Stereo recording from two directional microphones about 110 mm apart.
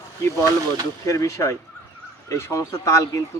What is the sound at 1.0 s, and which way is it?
A man's voice, 30° left (ahead or behind).